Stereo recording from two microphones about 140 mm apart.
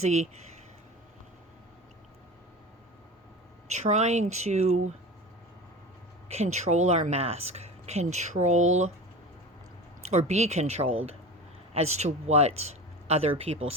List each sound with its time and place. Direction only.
0.0 s speech: 55° right (ahead or behind)
3.7 s speech: 55° right (ahead or behind)
6.2 s speech: 50° right (ahead or behind)
10.0 s speech: 50° right (ahead or behind)